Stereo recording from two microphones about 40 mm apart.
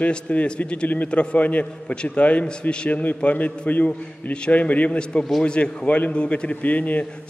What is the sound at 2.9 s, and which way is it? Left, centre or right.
A man's voice, left.